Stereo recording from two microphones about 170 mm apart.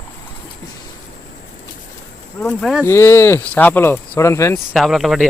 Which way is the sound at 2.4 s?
5° left (ahead or behind).